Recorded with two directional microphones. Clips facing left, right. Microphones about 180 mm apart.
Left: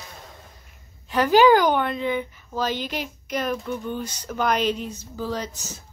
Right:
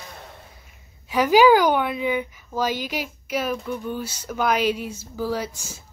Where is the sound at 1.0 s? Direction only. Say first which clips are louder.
Right 1 dB; 10° right (ahead or behind).